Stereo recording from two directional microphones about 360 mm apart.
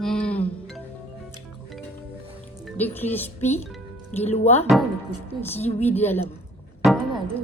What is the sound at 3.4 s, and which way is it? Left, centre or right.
Speech, centre.